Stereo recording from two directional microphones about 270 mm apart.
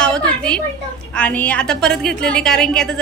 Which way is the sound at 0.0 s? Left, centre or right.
Centre.